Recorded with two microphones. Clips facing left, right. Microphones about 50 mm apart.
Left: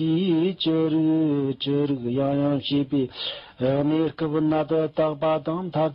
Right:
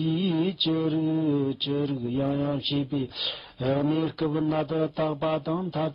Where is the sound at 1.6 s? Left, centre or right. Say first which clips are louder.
Left 4 dB; centre.